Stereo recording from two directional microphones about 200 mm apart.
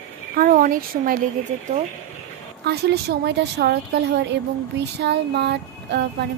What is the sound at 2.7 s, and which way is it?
Speech, 55° right (ahead or behind).